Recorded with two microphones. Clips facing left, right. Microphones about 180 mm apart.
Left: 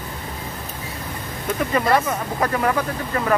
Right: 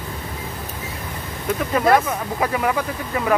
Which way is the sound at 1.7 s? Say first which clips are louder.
Right 3 dB; 5° right (ahead or behind).